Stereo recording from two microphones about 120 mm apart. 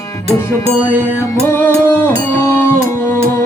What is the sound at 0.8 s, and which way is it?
Music, 15° right (ahead or behind).